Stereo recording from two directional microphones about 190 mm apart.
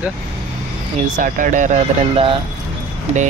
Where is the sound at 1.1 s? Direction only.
45° right (ahead or behind).